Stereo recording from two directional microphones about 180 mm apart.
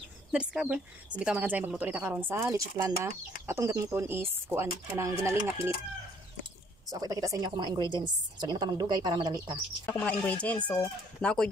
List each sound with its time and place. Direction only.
0.3 s speech: 5° right (ahead or behind)
6.9 s speech: 20° right (ahead or behind)
9.8 s speech: 5° left (ahead or behind)